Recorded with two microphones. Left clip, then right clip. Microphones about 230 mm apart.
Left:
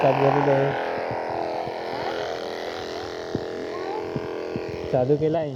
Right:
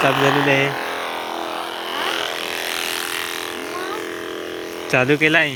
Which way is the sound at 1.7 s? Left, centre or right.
Centre.